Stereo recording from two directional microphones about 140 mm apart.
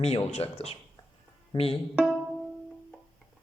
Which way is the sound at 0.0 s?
50° left (ahead or behind).